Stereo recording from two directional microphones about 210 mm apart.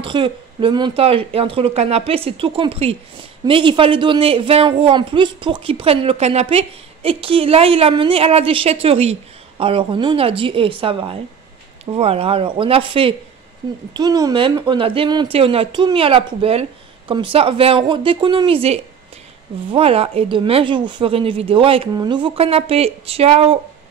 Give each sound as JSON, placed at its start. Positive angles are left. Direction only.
{"t": 0.0, "sound": "speech", "side_deg": -25}